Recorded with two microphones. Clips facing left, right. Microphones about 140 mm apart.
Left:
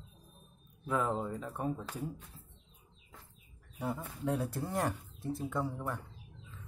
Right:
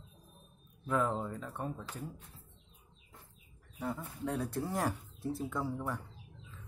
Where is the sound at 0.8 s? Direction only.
5° left (ahead or behind).